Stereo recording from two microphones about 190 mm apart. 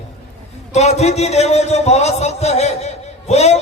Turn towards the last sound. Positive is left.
turn(degrees=35)  # may be behind; listen again after turning